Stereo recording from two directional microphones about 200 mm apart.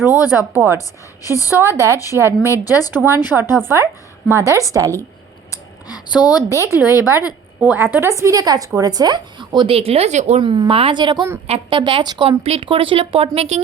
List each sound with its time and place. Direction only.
0.3 s a woman's voice: 10° right (ahead or behind)
0.8 s a woman's voice: 15° left (ahead or behind)
3.2 s a woman's voice: 10° right (ahead or behind)
5.5 s a sound: 20° left (ahead or behind)
6.5 s a woman's voice: 15° right (ahead or behind)
6.8 s a woman's voice: 15° left (ahead or behind)
7.6 s a woman's voice: 10° right (ahead or behind); by 13.6 s 30° right (ahead or behind)